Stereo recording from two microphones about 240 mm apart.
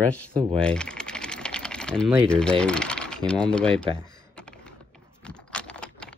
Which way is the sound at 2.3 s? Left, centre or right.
Centre.